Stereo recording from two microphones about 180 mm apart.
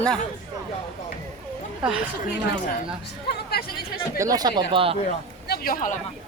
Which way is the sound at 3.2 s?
60° left (ahead or behind).